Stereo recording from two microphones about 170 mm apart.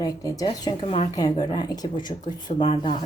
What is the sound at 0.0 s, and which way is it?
Speech, 20° left (ahead or behind).